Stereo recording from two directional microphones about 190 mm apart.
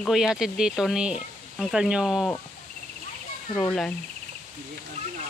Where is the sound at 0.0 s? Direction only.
5° right (ahead or behind).